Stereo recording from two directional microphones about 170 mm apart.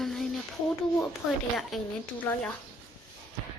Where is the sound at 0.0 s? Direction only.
Centre (ahead or behind).